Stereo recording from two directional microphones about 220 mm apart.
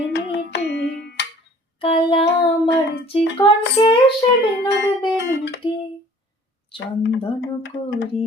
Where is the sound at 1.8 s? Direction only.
25° left (ahead or behind).